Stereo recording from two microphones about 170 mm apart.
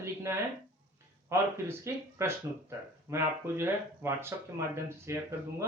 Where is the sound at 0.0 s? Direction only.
15° right (ahead or behind).